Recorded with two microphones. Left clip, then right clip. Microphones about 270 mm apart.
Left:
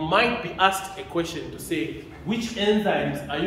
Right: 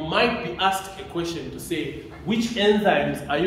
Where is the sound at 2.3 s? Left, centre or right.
Centre.